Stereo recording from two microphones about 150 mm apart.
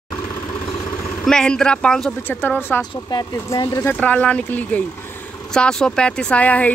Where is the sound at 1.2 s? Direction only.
5° left (ahead or behind).